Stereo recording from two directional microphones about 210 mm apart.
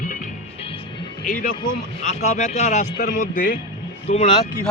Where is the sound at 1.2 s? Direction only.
40° left (ahead or behind).